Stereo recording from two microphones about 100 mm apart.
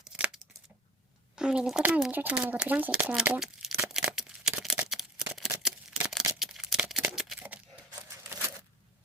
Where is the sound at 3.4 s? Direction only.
5° right (ahead or behind).